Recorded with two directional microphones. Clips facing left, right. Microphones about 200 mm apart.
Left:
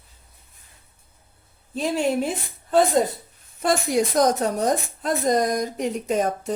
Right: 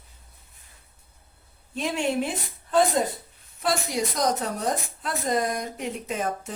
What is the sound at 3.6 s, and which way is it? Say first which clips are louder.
Speech: left 5 dB; 50° left (ahead or behind).